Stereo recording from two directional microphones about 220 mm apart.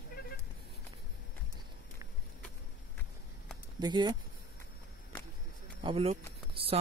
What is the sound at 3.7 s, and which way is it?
Speech, 20° right (ahead or behind).